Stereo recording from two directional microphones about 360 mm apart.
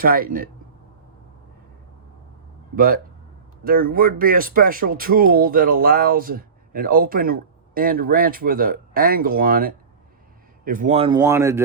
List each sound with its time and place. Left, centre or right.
0.0 s speech: right
2.7 s speech: right; by 11.6 s centre